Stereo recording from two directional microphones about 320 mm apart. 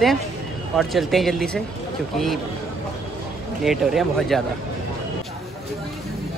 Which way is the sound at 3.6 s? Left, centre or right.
Centre.